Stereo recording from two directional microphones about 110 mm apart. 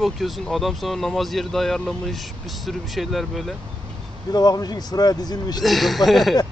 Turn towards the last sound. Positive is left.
turn(degrees=0)  # may be behind; listen again after turning